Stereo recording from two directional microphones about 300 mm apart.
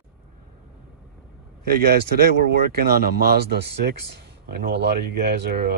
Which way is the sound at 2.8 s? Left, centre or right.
Right.